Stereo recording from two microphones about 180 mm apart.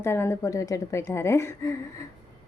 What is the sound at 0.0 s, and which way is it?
A woman's voice, 15° left (ahead or behind).